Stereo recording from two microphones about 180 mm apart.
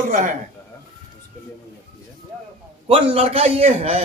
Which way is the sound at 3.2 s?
35° right (ahead or behind).